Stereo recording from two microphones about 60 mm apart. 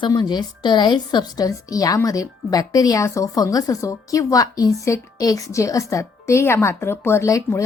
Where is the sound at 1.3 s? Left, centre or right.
Left.